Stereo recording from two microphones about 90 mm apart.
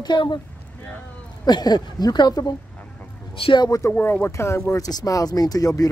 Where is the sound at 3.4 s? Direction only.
65° left (ahead or behind).